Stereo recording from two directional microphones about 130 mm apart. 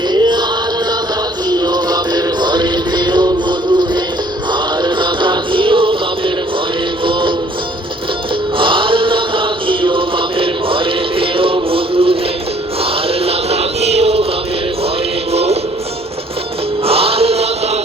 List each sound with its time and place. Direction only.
0.1 s music: 35° right (ahead or behind)
1.5 s music: 30° right (ahead or behind)
8.5 s music: 40° right (ahead or behind)
15.3 s music: 50° right (ahead or behind)
16.8 s chant: 50° right (ahead or behind)